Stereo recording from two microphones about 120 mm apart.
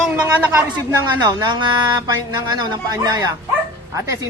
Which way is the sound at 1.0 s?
35° right (ahead or behind).